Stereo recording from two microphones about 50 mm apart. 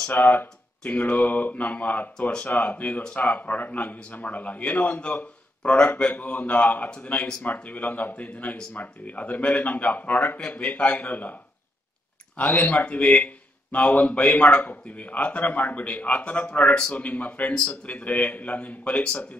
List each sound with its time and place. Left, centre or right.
0.1 s speech: left
5.6 s a man's voice: centre
6.1 s a man's voice: left
12.4 s a man's voice: left